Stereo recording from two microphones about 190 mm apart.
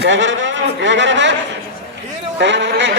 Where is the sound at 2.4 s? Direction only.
70° right (ahead or behind).